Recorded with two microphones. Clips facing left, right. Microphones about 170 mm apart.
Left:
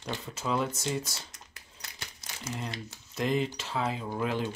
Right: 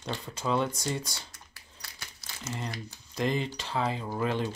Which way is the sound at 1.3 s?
20° left (ahead or behind).